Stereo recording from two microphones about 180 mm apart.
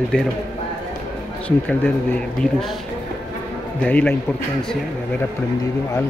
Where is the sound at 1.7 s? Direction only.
5° left (ahead or behind).